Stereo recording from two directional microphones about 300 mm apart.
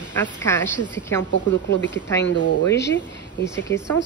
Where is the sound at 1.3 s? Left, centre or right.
Left.